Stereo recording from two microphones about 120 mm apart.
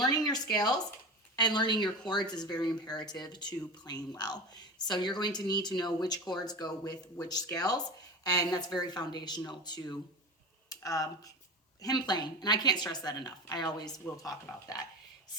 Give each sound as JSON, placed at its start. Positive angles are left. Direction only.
{"t": 0.3, "sound": "speech", "side_deg": 35}